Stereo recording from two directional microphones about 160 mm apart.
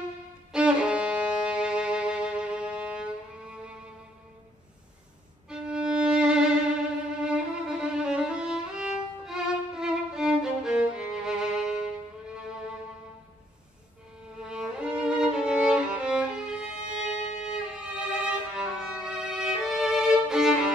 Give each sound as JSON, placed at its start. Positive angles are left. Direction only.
{"t": 0.5, "sound": "violin", "side_deg": -5}
{"t": 5.5, "sound": "violin", "side_deg": -5}
{"t": 14.4, "sound": "music", "side_deg": -5}
{"t": 17.1, "sound": "violin", "side_deg": 45}
{"t": 17.7, "sound": "violin", "side_deg": -5}